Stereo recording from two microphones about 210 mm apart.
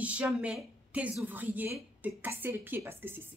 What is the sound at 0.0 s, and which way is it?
A woman's voice, 5° right (ahead or behind).